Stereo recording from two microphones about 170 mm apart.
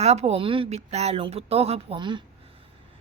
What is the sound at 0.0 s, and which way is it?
Speech, 40° right (ahead or behind).